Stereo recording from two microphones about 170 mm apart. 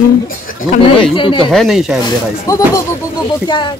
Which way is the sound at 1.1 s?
30° left (ahead or behind).